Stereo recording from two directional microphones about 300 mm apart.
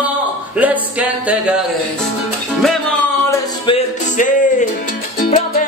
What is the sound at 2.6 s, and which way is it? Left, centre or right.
Music, centre.